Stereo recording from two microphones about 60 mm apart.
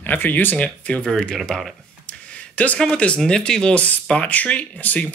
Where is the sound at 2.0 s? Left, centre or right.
Left.